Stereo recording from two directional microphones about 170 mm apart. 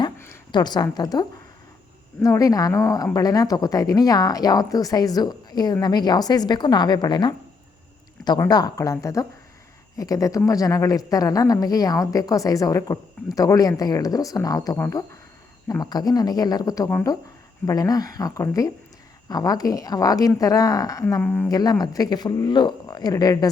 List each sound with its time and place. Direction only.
0.5 s speech: 25° left (ahead or behind)
2.2 s speech: 20° left (ahead or behind)
21.5 s speech: 25° left (ahead or behind)